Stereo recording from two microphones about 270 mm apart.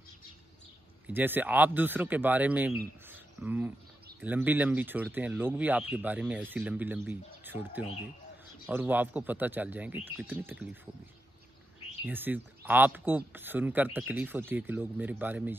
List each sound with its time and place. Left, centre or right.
1.0 s speech: centre
12.1 s speech: centre